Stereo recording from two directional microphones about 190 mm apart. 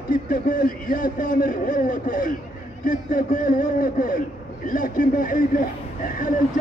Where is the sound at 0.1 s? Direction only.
45° left (ahead or behind).